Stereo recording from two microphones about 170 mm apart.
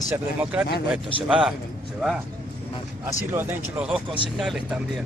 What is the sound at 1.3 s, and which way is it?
Speech, 5° right (ahead or behind).